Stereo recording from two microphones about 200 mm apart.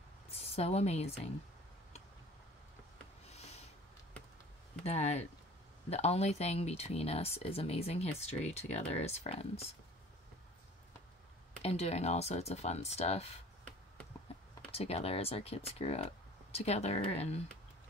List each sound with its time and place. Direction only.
0.3 s a woman's voice: 30° left (ahead or behind)
4.8 s speech: 30° left (ahead or behind)
11.6 s speech: 30° left (ahead or behind)
14.7 s speech: 30° left (ahead or behind)